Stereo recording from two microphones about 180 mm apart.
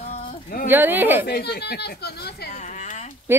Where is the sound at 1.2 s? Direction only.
65° left (ahead or behind).